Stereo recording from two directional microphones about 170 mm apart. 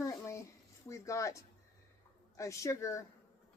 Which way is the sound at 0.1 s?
15° left (ahead or behind).